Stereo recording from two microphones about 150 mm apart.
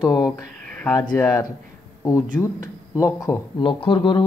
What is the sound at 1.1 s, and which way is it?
Speech, 20° left (ahead or behind).